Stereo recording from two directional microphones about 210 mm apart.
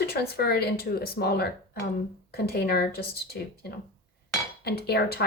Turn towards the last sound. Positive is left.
turn(degrees=50)  # may be behind; listen again after turning